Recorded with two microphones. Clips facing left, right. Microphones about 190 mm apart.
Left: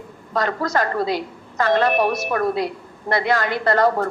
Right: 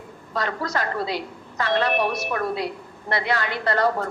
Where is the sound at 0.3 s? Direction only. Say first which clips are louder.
Left 5 dB; 45° left (ahead or behind).